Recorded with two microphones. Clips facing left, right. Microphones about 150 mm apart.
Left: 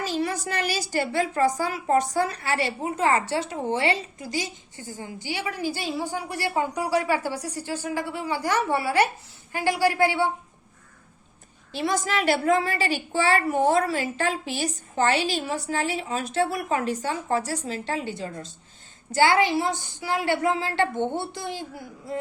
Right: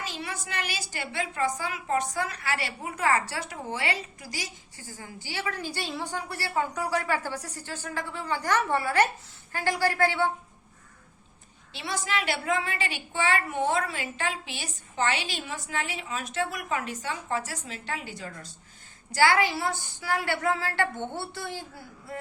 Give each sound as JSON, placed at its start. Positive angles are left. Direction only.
{"t": 0.0, "sound": "a woman's voice", "side_deg": 40}
{"t": 11.7, "sound": "a woman's voice", "side_deg": 45}